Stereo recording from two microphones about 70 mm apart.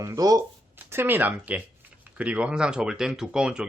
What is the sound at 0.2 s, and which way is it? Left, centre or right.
Speech, right.